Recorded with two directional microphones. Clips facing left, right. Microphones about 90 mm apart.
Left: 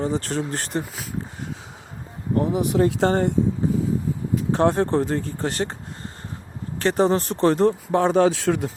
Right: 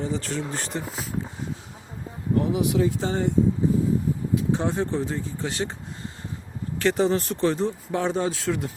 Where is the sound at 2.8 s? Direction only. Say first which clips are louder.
Left 5 dB; 65° left (ahead or behind).